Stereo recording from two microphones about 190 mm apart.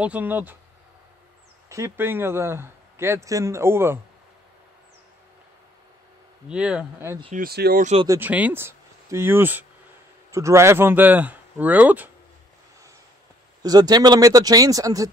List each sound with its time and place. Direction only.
0.0 s a man's voice: 10° right (ahead or behind)
1.7 s a man's voice: 15° right (ahead or behind)
6.5 s speech: 5° right (ahead or behind)
7.3 s speech: 55° right (ahead or behind)
7.8 s speech: 35° right (ahead or behind)
8.1 s a man's voice: 10° right (ahead or behind)
13.6 s speech: 20° right (ahead or behind)